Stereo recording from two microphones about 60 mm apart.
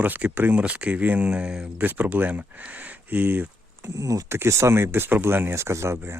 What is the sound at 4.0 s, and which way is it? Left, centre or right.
Speech, right.